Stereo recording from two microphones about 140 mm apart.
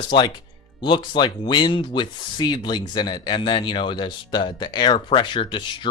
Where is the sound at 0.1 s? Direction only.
35° left (ahead or behind).